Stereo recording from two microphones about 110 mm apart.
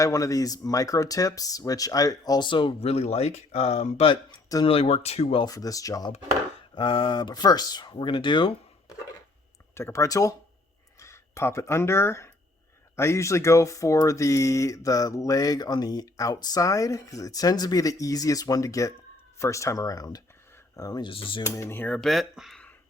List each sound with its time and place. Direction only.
0.0 s speech: 30° left (ahead or behind)
2.5 s speech: 50° left (ahead or behind)
2.8 s speech: 70° left (ahead or behind)
4.6 s speech: 60° left (ahead or behind)
5.4 s speech: 35° left (ahead or behind)
6.7 s speech: 50° left (ahead or behind)
9.7 s speech: 25° left (ahead or behind)
21.1 s speech: 50° left (ahead or behind)
21.4 s speech: 25° left (ahead or behind)
21.9 s speech: centre (ahead or behind)